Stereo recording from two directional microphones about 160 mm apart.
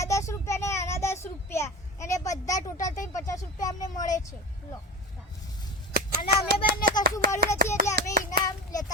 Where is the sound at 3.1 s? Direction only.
20° left (ahead or behind).